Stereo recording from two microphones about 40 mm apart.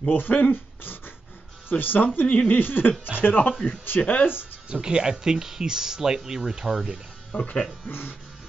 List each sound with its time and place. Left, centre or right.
0.1 s speech: left
4.0 s speech: left
4.8 s speech: right
7.3 s speech: left